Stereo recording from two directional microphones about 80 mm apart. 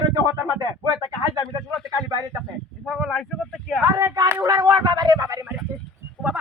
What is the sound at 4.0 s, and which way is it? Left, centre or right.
Speech, right.